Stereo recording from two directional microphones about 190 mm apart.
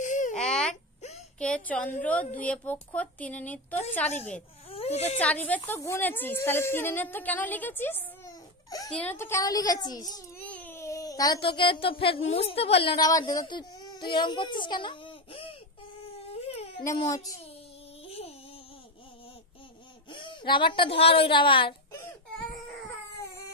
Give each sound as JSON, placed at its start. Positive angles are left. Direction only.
{"t": 0.0, "sound": "baby cry", "side_deg": 40}
{"t": 0.4, "sound": "baby cry", "side_deg": 5}
{"t": 1.4, "sound": "a woman's voice", "side_deg": 5}
{"t": 4.6, "sound": "a sound", "side_deg": 30}
{"t": 5.2, "sound": "a woman's voice", "side_deg": 10}
{"t": 10.4, "sound": "speech", "side_deg": 5}
{"t": 16.3, "sound": "a sound", "side_deg": 30}
{"t": 17.0, "sound": "a woman's voice", "side_deg": 20}
{"t": 18.0, "sound": "a sound", "side_deg": 30}
{"t": 20.1, "sound": "a woman's voice", "side_deg": 25}